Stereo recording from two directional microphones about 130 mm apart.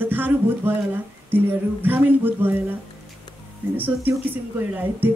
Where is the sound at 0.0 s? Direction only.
15° right (ahead or behind).